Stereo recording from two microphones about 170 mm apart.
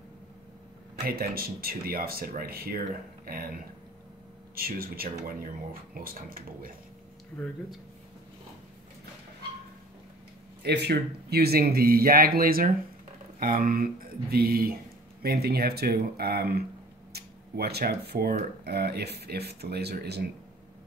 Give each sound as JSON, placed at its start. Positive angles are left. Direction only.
{"t": 1.0, "sound": "speech", "side_deg": -60}
{"t": 4.6, "sound": "speech", "side_deg": -60}
{"t": 10.6, "sound": "speech", "side_deg": -75}